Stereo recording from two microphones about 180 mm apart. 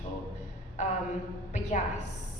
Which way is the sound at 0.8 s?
40° left (ahead or behind).